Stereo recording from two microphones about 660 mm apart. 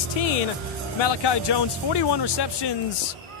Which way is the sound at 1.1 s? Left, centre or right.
Left.